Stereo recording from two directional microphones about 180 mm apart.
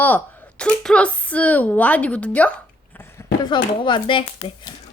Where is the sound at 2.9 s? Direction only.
15° left (ahead or behind).